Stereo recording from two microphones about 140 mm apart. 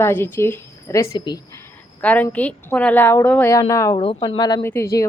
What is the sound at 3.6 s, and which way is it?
Speech, 25° left (ahead or behind).